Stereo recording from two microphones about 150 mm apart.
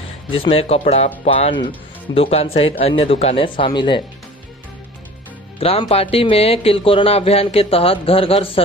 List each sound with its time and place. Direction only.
0.3 s speech: 40° left (ahead or behind)
5.6 s speech: 40° left (ahead or behind)